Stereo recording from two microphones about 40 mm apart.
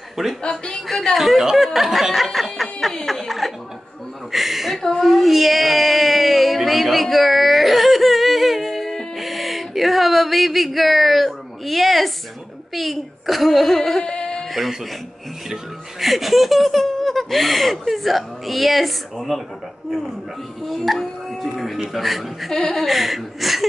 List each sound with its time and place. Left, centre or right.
0.4 s a woman's voice: left
1.1 s speech: centre
3.1 s chuckle: centre
4.3 s a woman's voice: centre
4.9 s a sound: centre
12.7 s speech: centre
14.0 s music: left
15.5 s speech: centre
20.6 s speech: centre
21.3 s a sound: centre
21.9 s speech: centre
22.5 s speech: centre
22.8 s speech: centre